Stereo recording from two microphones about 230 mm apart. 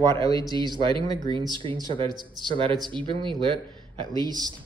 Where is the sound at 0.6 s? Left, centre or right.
Right.